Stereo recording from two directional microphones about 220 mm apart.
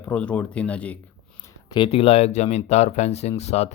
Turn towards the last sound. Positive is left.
turn(degrees=30)  # may be behind; listen again after turning